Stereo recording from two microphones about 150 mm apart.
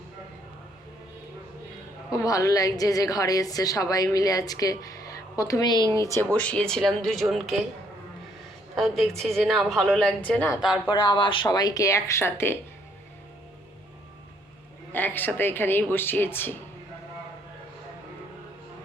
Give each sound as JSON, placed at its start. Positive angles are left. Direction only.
{"t": 2.1, "sound": "a woman's voice", "side_deg": 20}
{"t": 6.3, "sound": "a woman's voice", "side_deg": 10}
{"t": 8.7, "sound": "a woman's voice", "side_deg": 0}
{"t": 10.8, "sound": "a woman's voice", "side_deg": 35}
{"t": 14.9, "sound": "speech", "side_deg": 15}